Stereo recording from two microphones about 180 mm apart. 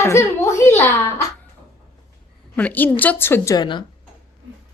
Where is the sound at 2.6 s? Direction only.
10° left (ahead or behind); by 3.8 s 25° left (ahead or behind).